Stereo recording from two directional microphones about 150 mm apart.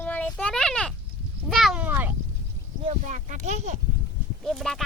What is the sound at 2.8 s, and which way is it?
Speech, 55° right (ahead or behind).